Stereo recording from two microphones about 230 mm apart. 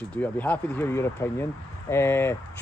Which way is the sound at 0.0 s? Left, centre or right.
Centre.